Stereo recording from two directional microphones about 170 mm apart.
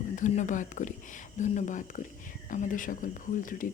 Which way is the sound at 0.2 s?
45° left (ahead or behind).